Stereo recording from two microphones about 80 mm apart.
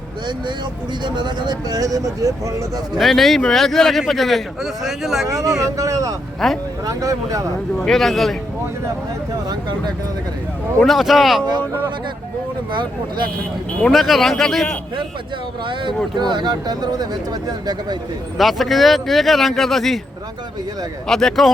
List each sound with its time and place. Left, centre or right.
1.0 s speech: right
3.0 s a man's voice: centre
5.3 s speech: right
6.4 s a man's voice: centre
6.8 s speech: right
7.8 s a man's voice: centre
9.5 s speech: right
10.8 s a man's voice: centre
12.7 s speech: right
13.8 s a man's voice: centre
15.6 s speech: right
16.1 s speech: right
18.3 s a man's voice: centre
21.1 s a man's voice: centre